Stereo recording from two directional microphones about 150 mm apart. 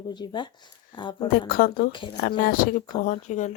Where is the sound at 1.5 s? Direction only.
75° left (ahead or behind); by 3.5 s 50° left (ahead or behind).